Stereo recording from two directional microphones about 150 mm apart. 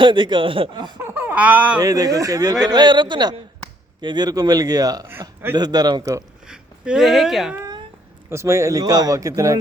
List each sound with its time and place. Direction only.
0.0 s speech: 30° right (ahead or behind)
1.0 s speech: 15° right (ahead or behind)
1.8 s speech: 25° right (ahead or behind)
6.4 s speech: 5° right (ahead or behind)
8.3 s speech: 20° right (ahead or behind)